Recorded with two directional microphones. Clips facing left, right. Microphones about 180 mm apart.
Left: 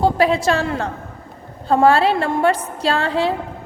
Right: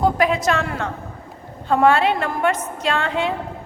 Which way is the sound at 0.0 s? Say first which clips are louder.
Left 2 dB; 30° left (ahead or behind).